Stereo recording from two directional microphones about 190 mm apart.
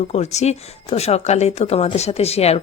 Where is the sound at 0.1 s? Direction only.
35° left (ahead or behind).